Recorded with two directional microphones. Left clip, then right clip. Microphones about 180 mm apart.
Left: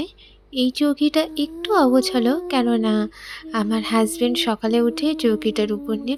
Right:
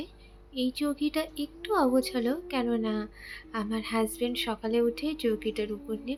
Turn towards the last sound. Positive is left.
turn(degrees=40)  # may be behind; listen again after turning